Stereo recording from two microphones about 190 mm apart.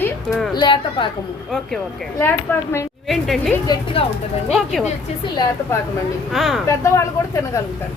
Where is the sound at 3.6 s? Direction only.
25° left (ahead or behind).